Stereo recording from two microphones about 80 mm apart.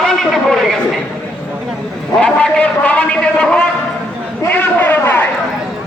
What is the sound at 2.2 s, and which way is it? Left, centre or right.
A man's voice, centre.